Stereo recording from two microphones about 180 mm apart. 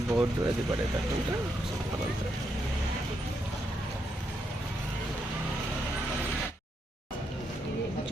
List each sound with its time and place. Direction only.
0.1 s speech: 20° right (ahead or behind)